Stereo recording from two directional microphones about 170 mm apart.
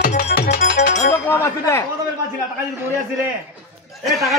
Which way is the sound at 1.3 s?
15° left (ahead or behind).